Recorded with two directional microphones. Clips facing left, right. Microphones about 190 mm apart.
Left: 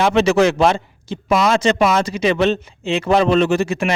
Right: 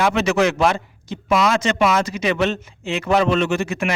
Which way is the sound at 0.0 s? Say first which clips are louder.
Left 4 dB; 30° left (ahead or behind).